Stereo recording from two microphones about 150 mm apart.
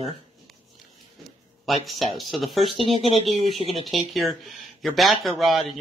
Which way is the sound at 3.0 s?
40° right (ahead or behind).